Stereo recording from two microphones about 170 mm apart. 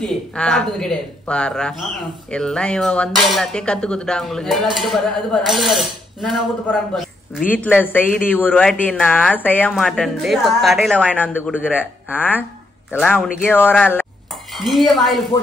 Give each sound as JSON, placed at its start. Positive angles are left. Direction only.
{"t": 0.0, "sound": "speech", "side_deg": 5}
{"t": 14.5, "sound": "speech", "side_deg": 0}